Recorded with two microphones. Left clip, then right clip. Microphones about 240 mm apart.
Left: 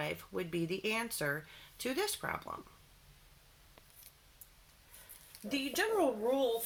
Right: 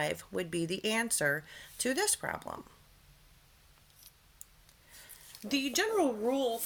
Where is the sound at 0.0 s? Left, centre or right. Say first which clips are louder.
Right 4 dB; right.